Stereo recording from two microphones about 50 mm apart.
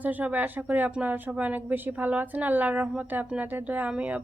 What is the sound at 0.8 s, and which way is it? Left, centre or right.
A woman's voice, right.